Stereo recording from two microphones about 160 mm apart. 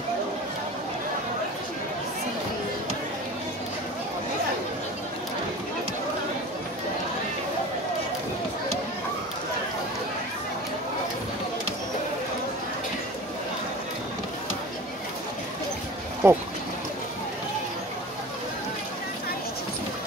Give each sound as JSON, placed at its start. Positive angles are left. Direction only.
{"t": 16.2, "sound": "speech", "side_deg": -15}